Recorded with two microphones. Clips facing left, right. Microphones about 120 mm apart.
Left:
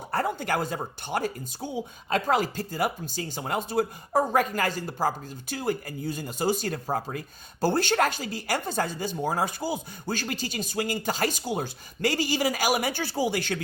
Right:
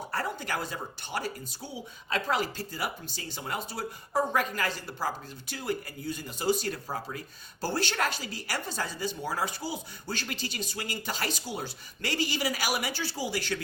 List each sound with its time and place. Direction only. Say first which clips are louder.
0.1 s speech: left 7 dB; 50° left (ahead or behind)